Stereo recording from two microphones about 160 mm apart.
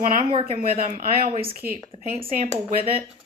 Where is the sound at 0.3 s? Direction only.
35° right (ahead or behind).